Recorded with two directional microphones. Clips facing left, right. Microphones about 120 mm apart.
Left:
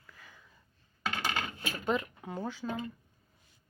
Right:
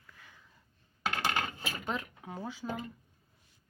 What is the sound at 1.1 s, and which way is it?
Coin, 35° right (ahead or behind).